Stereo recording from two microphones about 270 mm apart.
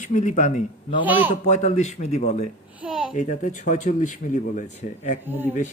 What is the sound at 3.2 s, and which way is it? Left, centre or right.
Speech, left.